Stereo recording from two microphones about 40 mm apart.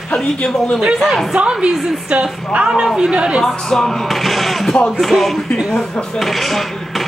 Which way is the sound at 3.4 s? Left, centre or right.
Centre.